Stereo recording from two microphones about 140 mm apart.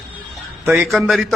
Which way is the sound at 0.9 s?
Centre (ahead or behind).